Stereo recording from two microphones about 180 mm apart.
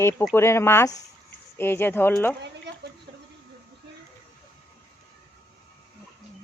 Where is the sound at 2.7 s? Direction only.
70° right (ahead or behind).